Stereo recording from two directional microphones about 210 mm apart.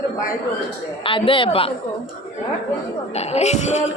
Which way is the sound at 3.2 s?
30° left (ahead or behind).